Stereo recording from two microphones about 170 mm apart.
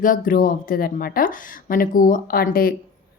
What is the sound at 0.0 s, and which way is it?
Speech, 55° left (ahead or behind).